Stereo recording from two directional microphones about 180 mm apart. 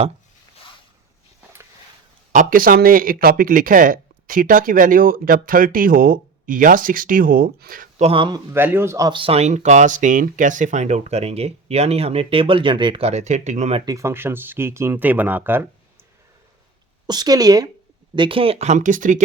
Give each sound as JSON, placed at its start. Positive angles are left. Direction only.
{"t": 2.3, "sound": "speech", "side_deg": -50}
{"t": 8.0, "sound": "a woman's voice", "side_deg": -30}
{"t": 8.5, "sound": "speech", "side_deg": -10}
{"t": 13.8, "sound": "speech", "side_deg": -15}
{"t": 17.1, "sound": "a woman's voice", "side_deg": -20}